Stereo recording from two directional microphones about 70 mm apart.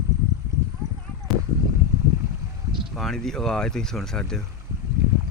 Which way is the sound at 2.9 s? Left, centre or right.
Centre.